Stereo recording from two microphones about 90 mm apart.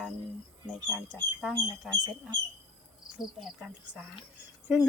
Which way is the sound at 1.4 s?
Centre (ahead or behind).